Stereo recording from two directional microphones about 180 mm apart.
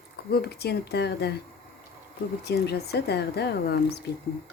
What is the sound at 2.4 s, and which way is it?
Speech, 65° left (ahead or behind).